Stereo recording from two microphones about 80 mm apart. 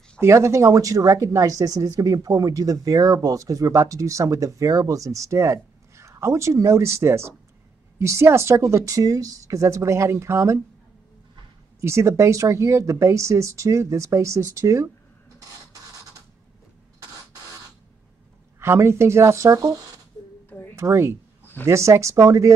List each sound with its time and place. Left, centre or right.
0.2 s speech: right
11.8 s speech: right
18.6 s speech: right
20.4 s a sound: left
20.7 s speech: right